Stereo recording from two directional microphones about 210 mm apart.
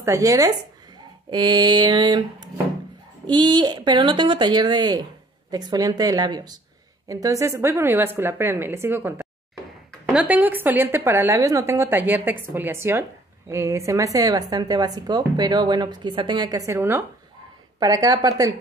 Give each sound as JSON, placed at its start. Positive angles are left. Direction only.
{"t": 0.0, "sound": "a woman's voice", "side_deg": -15}